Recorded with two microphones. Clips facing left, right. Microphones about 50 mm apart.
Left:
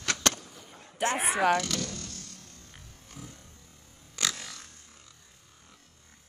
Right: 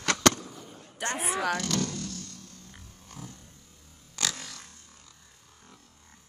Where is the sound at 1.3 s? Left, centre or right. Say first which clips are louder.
Left 4 dB; left.